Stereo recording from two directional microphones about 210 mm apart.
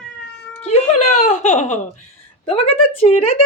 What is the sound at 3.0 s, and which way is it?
Speech, 30° left (ahead or behind).